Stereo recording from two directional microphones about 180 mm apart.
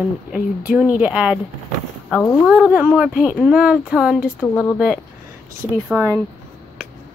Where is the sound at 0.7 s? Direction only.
5° right (ahead or behind).